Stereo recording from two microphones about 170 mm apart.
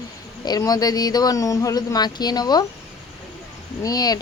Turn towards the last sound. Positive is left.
turn(degrees=20)  # may be behind; listen again after turning